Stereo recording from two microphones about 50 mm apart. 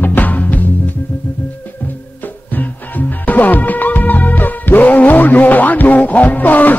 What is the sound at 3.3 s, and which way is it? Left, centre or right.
Music, left.